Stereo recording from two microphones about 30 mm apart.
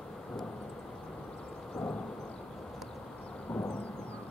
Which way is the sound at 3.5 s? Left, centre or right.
Left.